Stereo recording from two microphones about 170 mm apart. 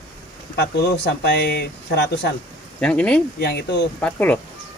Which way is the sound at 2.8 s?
5° left (ahead or behind).